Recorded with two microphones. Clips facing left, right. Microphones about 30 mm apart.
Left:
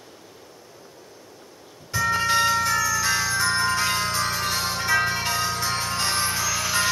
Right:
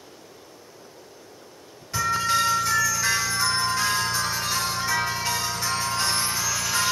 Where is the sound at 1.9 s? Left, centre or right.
Left.